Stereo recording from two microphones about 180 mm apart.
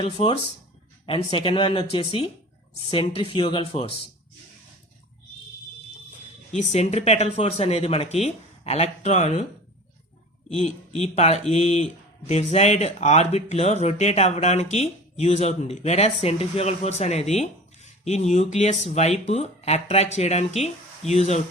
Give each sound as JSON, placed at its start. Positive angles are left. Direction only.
{"t": 0.0, "sound": "speech", "side_deg": 30}
{"t": 6.6, "sound": "speech", "side_deg": 40}
{"t": 10.5, "sound": "speech", "side_deg": 40}